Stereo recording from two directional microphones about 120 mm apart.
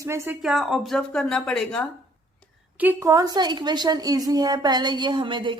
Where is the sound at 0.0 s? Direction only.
25° right (ahead or behind).